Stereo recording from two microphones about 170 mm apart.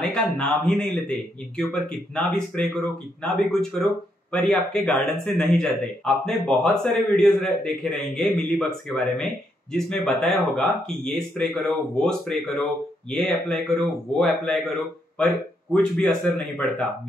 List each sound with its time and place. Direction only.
0.0 s speech: 5° left (ahead or behind)